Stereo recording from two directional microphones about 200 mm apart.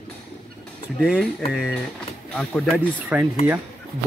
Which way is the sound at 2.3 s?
5° left (ahead or behind).